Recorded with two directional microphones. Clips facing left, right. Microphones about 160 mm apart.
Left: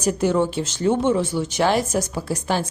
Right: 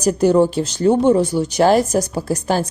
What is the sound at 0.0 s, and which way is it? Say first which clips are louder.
A woman's voice: right 6 dB; 40° right (ahead or behind).